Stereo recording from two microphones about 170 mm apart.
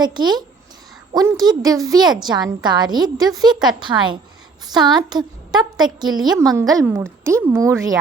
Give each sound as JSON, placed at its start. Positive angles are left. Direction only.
{"t": 0.0, "sound": "a woman's voice", "side_deg": -25}